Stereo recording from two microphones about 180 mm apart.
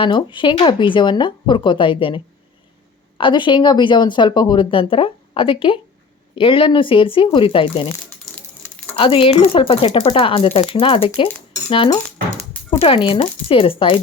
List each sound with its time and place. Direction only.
0.0 s speech: 25° left (ahead or behind)
8.2 s a sound: 10° left (ahead or behind)
9.0 s speech: 30° left (ahead or behind)